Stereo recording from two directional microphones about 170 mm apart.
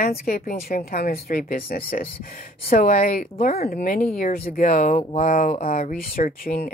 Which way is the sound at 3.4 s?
60° left (ahead or behind).